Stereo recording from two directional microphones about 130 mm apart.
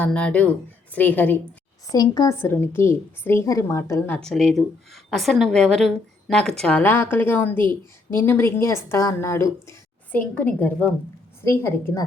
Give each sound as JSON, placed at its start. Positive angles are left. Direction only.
{"t": 0.0, "sound": "a woman's voice", "side_deg": 10}
{"t": 1.9, "sound": "speech", "side_deg": 30}
{"t": 2.4, "sound": "speech", "side_deg": 20}
{"t": 4.2, "sound": "a woman's voice", "side_deg": 5}
{"t": 10.2, "sound": "a woman's voice", "side_deg": 10}